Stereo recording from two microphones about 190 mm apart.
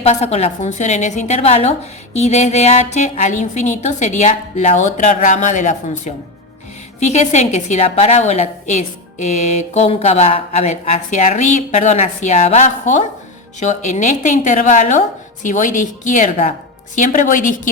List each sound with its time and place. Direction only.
0.0 s a woman's voice: 35° left (ahead or behind)